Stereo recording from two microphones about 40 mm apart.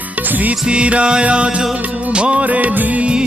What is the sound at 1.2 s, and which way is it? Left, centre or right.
Music of bollywood, right.